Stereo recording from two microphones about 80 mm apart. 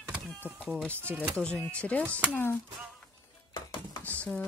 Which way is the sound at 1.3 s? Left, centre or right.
Centre.